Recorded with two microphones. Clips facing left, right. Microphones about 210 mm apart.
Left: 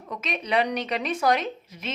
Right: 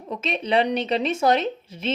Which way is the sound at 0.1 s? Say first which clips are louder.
Right 4 dB; 25° right (ahead or behind).